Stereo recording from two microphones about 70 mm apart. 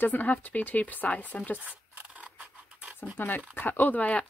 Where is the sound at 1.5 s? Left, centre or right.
Right.